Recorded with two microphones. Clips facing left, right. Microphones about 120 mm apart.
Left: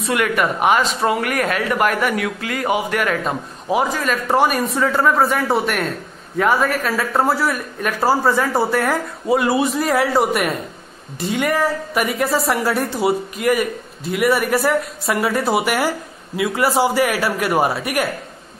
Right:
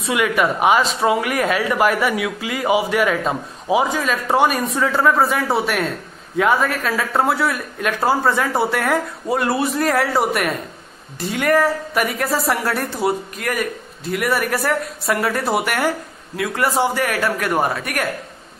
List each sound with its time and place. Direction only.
0.0 s a man's voice: 5° right (ahead or behind)